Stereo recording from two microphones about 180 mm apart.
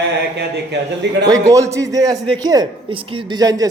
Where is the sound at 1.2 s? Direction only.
20° right (ahead or behind).